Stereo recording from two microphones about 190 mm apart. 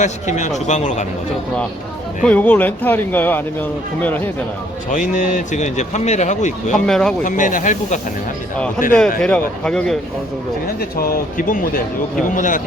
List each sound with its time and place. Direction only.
0.0 s a man's voice: 40° left (ahead or behind)
2.2 s speech: 10° left (ahead or behind)
4.9 s a man's voice: 40° left (ahead or behind)
6.7 s a man's voice: 5° left (ahead or behind)
7.3 s a man's voice: 45° left (ahead or behind)
8.9 s a man's voice: 5° left (ahead or behind)
10.8 s speech: 50° left (ahead or behind)